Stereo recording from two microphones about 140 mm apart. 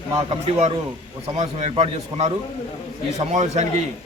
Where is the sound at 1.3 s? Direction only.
55° right (ahead or behind).